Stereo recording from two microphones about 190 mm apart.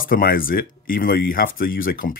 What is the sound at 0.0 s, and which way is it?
Speech, 50° left (ahead or behind).